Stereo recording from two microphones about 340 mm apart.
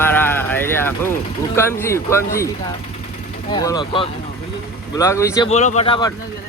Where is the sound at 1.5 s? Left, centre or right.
Centre.